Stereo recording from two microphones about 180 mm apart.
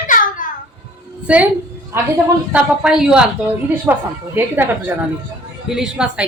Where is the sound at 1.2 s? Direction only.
5° right (ahead or behind).